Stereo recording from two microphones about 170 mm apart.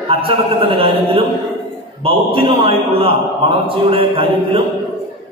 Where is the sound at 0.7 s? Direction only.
30° right (ahead or behind).